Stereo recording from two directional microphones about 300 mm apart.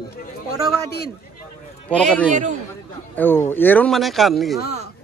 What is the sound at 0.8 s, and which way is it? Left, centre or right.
Speech, left.